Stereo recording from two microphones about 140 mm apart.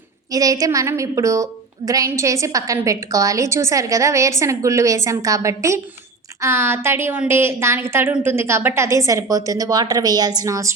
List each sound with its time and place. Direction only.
0.3 s a woman's voice: 25° right (ahead or behind)